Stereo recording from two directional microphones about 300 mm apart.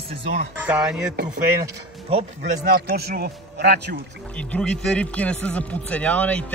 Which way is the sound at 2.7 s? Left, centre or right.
Right.